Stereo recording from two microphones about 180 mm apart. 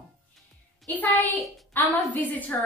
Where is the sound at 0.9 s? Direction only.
10° left (ahead or behind).